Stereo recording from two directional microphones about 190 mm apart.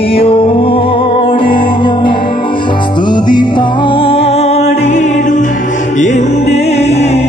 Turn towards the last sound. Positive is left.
turn(degrees=35)  # may be behind; listen again after turning